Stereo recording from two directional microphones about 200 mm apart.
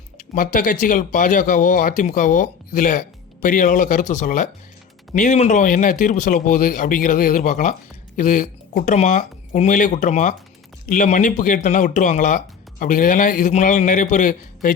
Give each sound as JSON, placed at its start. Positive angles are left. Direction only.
{"t": 0.2, "sound": "a man's voice", "side_deg": 40}